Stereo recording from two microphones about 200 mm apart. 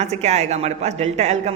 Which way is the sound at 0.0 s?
35° right (ahead or behind).